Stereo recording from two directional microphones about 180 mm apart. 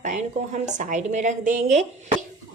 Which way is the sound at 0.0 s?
40° right (ahead or behind).